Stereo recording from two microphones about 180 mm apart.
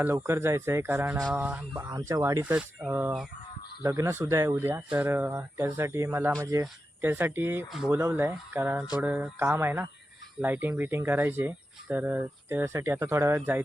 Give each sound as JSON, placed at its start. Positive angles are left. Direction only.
{"t": 0.0, "sound": "speech", "side_deg": -15}
{"t": 1.8, "sound": "speech", "side_deg": -20}
{"t": 2.4, "sound": "speech", "side_deg": -5}
{"t": 7.9, "sound": "speech", "side_deg": -15}